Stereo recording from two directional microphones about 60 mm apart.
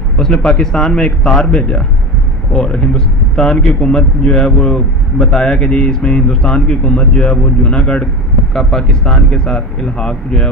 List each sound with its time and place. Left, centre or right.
0.5 s speech: centre